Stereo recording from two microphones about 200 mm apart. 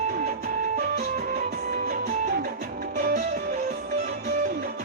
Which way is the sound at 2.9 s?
50° right (ahead or behind).